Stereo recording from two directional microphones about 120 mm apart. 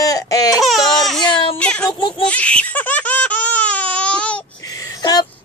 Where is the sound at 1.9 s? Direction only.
40° left (ahead or behind).